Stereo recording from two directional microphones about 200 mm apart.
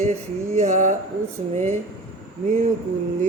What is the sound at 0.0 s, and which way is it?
Speech, 35° right (ahead or behind).